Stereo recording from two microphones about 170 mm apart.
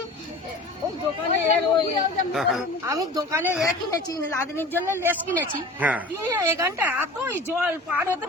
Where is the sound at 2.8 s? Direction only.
20° right (ahead or behind).